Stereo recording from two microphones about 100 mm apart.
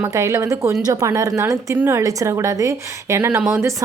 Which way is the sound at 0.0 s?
30° right (ahead or behind).